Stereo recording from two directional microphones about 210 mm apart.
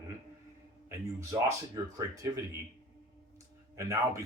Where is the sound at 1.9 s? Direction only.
15° right (ahead or behind).